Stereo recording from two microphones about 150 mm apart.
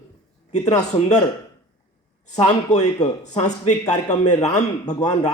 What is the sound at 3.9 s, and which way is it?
Speech, 25° left (ahead or behind).